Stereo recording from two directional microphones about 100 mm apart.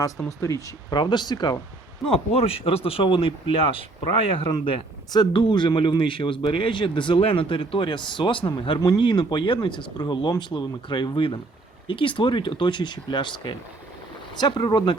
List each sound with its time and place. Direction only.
0.3 s speech: 35° left (ahead or behind)
0.9 s speech: 45° left (ahead or behind)
2.0 s speech: 80° left
5.1 s speech: 50° left (ahead or behind)